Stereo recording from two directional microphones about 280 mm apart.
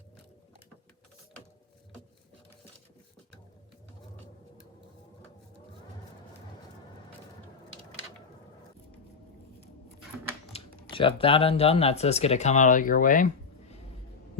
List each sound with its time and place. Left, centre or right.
10.5 s speech: centre